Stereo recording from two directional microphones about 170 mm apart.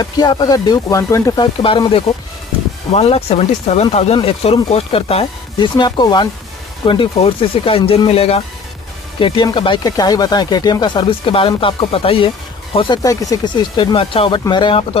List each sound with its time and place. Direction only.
0.0 s speech: 25° left (ahead or behind)